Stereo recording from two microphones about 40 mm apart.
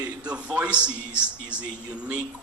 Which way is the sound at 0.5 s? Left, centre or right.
Right.